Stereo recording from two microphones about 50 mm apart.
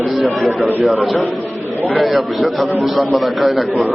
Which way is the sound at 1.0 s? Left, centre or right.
Centre.